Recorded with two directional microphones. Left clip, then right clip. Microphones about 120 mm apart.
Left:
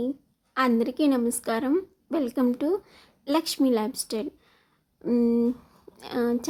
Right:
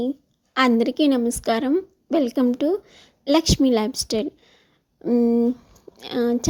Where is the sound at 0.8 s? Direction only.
40° right (ahead or behind).